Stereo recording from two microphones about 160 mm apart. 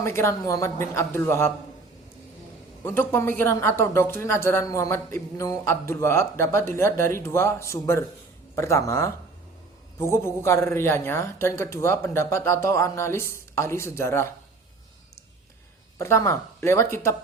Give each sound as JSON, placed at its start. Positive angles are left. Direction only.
{"t": 0.0, "sound": "speech", "side_deg": 15}
{"t": 2.8, "sound": "speech", "side_deg": 15}
{"t": 16.0, "sound": "speech", "side_deg": 20}